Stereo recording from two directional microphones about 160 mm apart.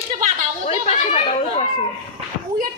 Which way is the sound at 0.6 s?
40° left (ahead or behind).